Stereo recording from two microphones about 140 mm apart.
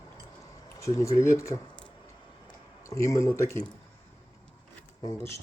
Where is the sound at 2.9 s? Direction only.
20° left (ahead or behind).